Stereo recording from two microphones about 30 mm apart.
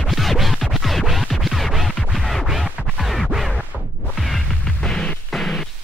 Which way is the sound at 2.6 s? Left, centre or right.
Centre.